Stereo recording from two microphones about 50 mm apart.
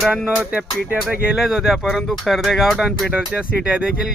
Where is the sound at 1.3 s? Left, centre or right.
Centre.